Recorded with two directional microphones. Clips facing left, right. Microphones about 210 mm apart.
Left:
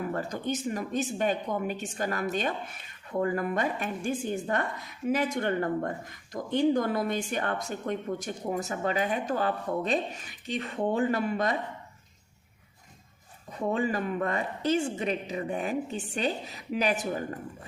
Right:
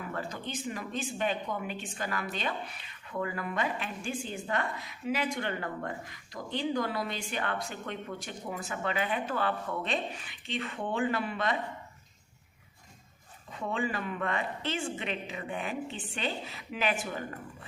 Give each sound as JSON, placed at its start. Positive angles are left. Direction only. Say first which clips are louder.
{"t": 0.0, "sound": "speech", "louder": "left 6 dB", "side_deg": 45}
{"t": 13.5, "sound": "a woman's voice", "louder": "left 5 dB", "side_deg": 40}